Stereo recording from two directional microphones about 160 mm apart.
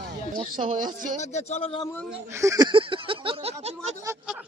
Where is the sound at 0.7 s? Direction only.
55° right (ahead or behind).